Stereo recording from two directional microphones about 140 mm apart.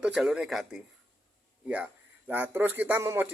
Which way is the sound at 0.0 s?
5° right (ahead or behind).